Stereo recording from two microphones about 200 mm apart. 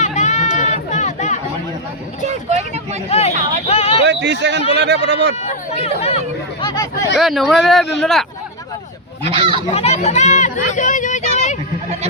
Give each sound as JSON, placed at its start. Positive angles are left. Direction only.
{"t": 0.0, "sound": "music", "side_deg": 35}
{"t": 2.2, "sound": "vehicle", "side_deg": -35}
{"t": 3.1, "sound": "speech", "side_deg": 30}
{"t": 3.7, "sound": "a sound", "side_deg": 30}
{"t": 4.0, "sound": "speech", "side_deg": -60}
{"t": 5.4, "sound": "speech", "side_deg": 30}
{"t": 7.2, "sound": "speech", "side_deg": 0}
{"t": 9.3, "sound": "speech", "side_deg": -25}
{"t": 9.7, "sound": "speech", "side_deg": 30}